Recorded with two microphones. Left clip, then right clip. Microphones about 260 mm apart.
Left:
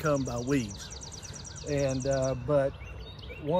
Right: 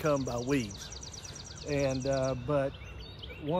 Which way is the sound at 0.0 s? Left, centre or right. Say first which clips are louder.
Left 1 dB; right.